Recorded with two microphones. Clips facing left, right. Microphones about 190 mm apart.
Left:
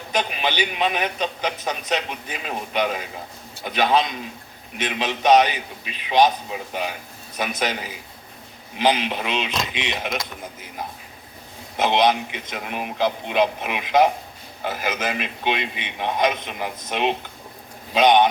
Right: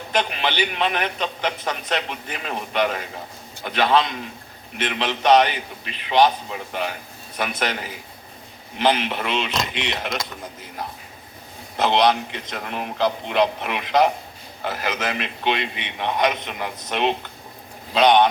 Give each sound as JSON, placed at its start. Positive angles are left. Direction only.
{"t": 0.1, "sound": "a man's voice", "side_deg": 15}
{"t": 7.6, "sound": "a man's voice", "side_deg": 15}
{"t": 11.8, "sound": "a man's voice", "side_deg": 15}